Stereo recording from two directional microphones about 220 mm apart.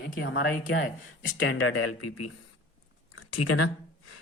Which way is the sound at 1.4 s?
75° left (ahead or behind).